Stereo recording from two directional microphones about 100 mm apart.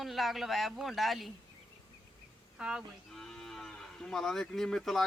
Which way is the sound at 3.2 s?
5° left (ahead or behind).